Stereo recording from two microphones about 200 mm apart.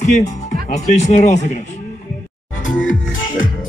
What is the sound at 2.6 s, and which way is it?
Music, 40° left (ahead or behind).